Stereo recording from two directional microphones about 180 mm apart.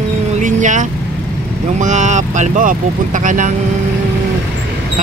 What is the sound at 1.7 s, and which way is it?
Speech, 40° right (ahead or behind).